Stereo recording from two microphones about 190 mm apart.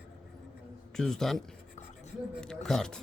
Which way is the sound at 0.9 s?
5° left (ahead or behind).